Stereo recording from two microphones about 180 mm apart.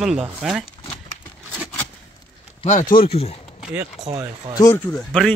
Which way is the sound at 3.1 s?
35° left (ahead or behind).